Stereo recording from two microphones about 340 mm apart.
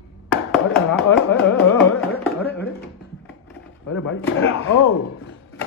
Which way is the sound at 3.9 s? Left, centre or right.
Left.